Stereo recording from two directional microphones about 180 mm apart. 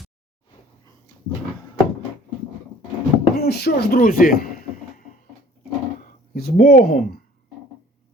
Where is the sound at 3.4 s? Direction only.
60° left (ahead or behind).